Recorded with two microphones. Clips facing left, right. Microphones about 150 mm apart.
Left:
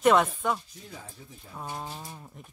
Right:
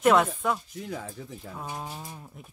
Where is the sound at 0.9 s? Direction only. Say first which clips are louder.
Right 9 dB; 90° right.